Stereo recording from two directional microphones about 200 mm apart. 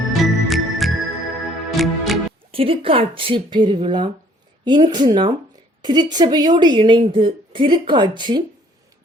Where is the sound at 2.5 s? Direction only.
25° right (ahead or behind).